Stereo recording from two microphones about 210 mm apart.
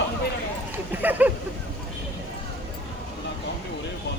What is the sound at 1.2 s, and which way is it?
Speech, 5° right (ahead or behind).